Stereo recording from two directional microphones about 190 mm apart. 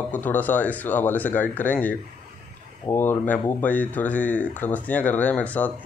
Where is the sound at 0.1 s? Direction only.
10° left (ahead or behind).